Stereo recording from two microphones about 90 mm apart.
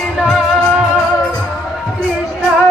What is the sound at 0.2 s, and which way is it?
Music, centre (ahead or behind).